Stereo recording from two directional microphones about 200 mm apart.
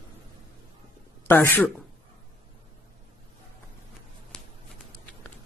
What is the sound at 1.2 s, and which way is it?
Speech, 10° left (ahead or behind).